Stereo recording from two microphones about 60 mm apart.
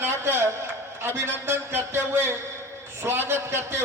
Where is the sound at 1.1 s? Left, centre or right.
Right.